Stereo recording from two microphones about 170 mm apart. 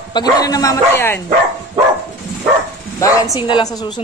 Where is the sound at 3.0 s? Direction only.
20° left (ahead or behind).